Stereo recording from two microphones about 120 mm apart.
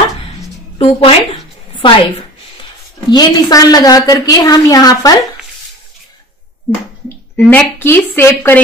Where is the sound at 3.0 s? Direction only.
35° left (ahead or behind).